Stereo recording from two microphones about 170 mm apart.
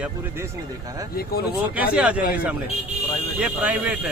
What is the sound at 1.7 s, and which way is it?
Speech, 10° right (ahead or behind).